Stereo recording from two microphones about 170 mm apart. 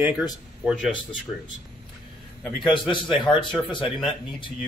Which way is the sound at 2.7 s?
30° left (ahead or behind).